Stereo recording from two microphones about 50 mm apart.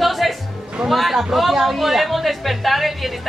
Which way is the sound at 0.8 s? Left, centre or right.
Centre.